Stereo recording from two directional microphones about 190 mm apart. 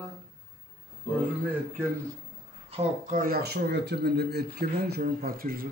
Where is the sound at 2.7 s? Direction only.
40° right (ahead or behind).